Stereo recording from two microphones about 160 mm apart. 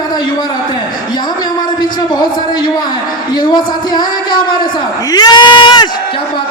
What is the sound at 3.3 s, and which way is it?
Speech, 25° left (ahead or behind).